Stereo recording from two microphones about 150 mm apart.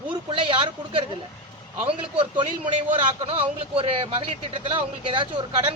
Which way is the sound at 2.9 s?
35° right (ahead or behind).